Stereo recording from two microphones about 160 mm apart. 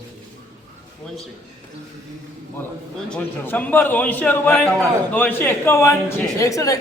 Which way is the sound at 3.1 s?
10° left (ahead or behind).